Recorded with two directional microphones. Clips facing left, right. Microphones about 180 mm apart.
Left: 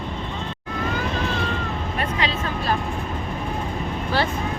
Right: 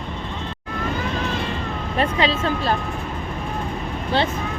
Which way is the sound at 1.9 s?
30° right (ahead or behind).